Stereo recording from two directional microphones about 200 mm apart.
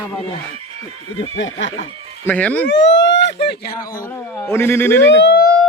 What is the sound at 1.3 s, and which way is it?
Speech, 70° left (ahead or behind).